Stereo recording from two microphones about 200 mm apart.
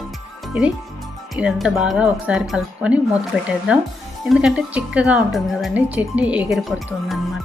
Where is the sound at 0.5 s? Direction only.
5° right (ahead or behind).